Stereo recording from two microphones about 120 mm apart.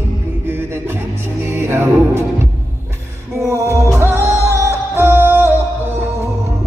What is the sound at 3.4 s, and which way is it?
Music, 25° right (ahead or behind).